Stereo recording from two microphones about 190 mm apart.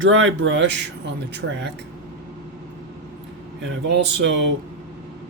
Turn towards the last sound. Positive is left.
turn(degrees=-70)  # may be behind; listen again after turning